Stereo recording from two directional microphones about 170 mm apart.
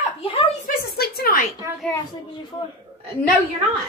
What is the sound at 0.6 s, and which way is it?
Speech, 65° left (ahead or behind).